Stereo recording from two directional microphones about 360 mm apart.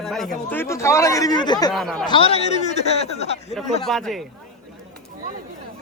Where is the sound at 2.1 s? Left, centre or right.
Centre.